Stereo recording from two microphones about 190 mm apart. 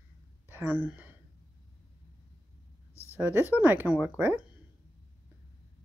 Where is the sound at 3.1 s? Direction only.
10° right (ahead or behind).